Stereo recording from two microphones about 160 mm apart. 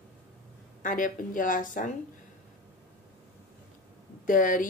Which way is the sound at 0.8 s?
55° left (ahead or behind).